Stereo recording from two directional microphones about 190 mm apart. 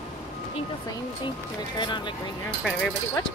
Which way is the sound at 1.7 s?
25° left (ahead or behind).